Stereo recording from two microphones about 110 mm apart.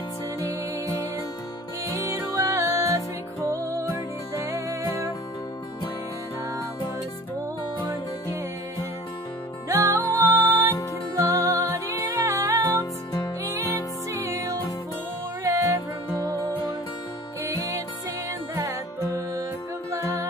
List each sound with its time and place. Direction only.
0.4 s music: 30° right (ahead or behind)
9.7 s music: 25° right (ahead or behind)
18.5 s music: 30° right (ahead or behind)